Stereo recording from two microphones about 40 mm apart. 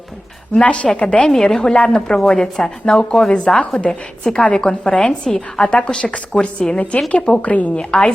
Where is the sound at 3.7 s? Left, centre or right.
Left.